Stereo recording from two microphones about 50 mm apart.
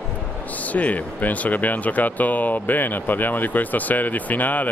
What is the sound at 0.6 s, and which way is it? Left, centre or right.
Speech, left.